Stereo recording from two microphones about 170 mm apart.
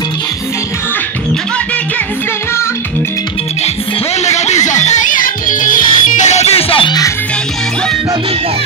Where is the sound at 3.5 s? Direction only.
40° left (ahead or behind).